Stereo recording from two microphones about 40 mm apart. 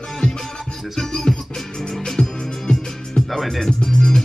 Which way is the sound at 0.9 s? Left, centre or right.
Centre.